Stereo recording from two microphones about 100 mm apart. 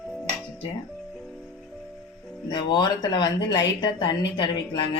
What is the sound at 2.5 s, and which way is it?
A woman's voice, 50° left (ahead or behind).